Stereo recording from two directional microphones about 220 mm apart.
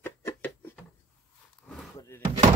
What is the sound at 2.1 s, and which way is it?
Door, 10° left (ahead or behind).